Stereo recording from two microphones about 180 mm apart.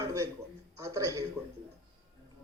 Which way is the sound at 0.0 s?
15° right (ahead or behind).